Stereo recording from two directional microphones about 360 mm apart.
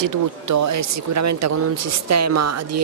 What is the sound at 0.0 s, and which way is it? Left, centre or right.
Speech, right.